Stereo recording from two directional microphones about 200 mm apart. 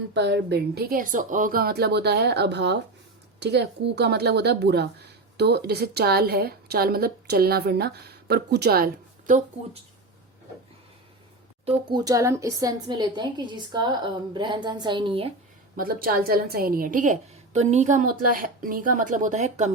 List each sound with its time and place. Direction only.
0.1 s speech: 60° right (ahead or behind); by 9.4 s 45° right (ahead or behind)
11.6 s a woman's voice: 25° right (ahead or behind)
15.7 s speech: 45° right (ahead or behind)